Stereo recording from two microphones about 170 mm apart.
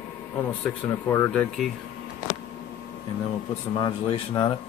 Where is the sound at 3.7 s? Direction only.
30° left (ahead or behind).